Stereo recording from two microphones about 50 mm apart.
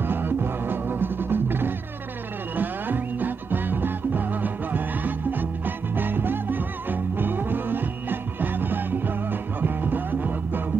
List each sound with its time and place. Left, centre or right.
0.0 s music: right